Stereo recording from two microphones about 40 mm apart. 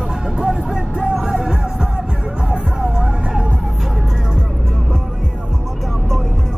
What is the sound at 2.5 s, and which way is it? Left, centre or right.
Vehicle, right.